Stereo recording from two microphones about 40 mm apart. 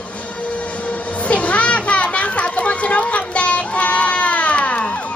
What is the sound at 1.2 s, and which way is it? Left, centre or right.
Children playing, left.